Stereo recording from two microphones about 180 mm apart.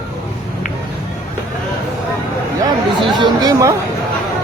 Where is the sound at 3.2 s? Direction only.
20° right (ahead or behind).